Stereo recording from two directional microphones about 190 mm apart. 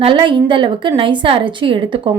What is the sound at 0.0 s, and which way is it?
Speech, 25° right (ahead or behind).